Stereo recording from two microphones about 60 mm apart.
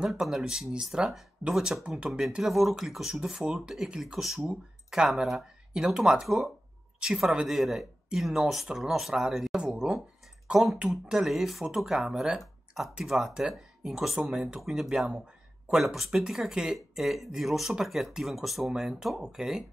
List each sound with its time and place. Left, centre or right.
0.1 s speech: centre
12.4 s a sound: centre
13.0 s speech: centre